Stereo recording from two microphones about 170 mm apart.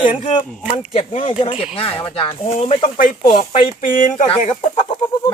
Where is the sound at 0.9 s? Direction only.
35° left (ahead or behind).